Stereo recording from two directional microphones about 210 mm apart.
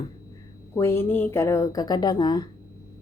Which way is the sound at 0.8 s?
10° left (ahead or behind).